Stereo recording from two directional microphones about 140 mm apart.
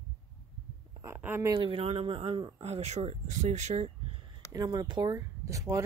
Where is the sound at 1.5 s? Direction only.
40° right (ahead or behind).